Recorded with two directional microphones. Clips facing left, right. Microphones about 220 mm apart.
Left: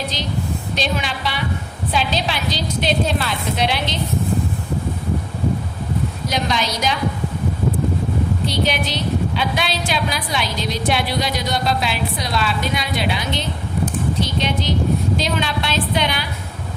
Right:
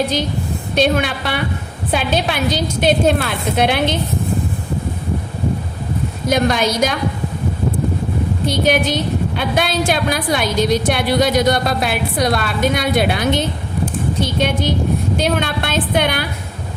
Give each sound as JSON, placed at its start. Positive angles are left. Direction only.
{"t": 0.8, "sound": "a woman's voice", "side_deg": -55}
{"t": 6.2, "sound": "a woman's voice", "side_deg": -55}
{"t": 8.4, "sound": "a woman's voice", "side_deg": -50}